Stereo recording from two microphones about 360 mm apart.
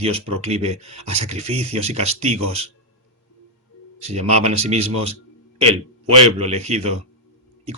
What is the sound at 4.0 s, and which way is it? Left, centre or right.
Speech, centre.